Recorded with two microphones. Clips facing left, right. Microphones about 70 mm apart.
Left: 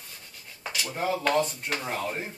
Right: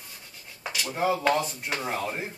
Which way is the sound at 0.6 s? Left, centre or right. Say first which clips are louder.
Right 1 dB; centre.